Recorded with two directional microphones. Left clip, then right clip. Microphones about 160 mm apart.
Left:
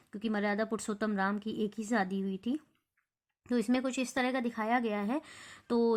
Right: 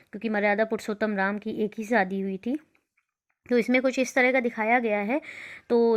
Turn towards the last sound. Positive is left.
turn(degrees=-20)  # may be behind; listen again after turning